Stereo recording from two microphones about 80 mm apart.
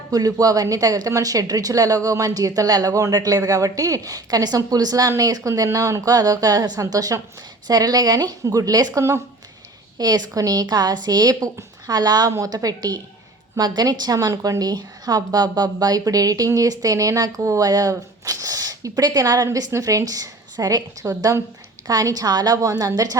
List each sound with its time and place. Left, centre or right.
0.1 s speech: right
10.0 s speech: right